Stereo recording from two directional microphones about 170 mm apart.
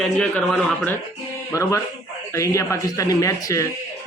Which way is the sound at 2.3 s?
20° left (ahead or behind).